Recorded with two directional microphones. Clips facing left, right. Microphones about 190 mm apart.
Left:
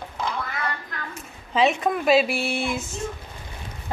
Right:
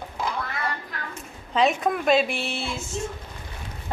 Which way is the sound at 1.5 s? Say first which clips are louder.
Left 1 dB; centre (ahead or behind).